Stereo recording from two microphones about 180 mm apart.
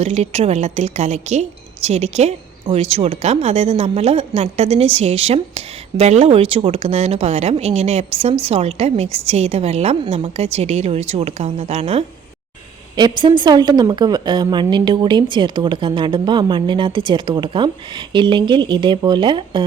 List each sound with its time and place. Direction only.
0.0 s a woman's voice: 35° right (ahead or behind)